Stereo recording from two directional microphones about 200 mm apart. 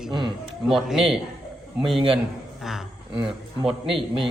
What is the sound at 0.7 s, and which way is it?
A man's voice, centre (ahead or behind).